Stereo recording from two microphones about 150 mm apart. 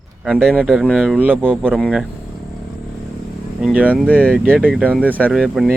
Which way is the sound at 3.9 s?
10° left (ahead or behind).